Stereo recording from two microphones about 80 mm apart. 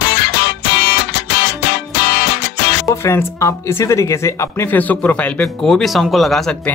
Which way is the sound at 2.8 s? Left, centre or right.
Left.